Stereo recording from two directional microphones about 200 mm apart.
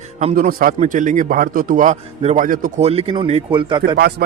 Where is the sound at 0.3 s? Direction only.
45° right (ahead or behind); by 3.9 s 25° right (ahead or behind).